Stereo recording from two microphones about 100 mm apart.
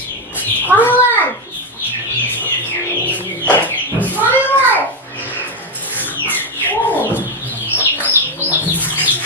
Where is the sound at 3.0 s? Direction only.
15° left (ahead or behind).